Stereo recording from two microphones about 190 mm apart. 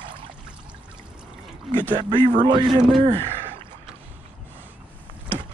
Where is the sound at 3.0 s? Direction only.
30° right (ahead or behind).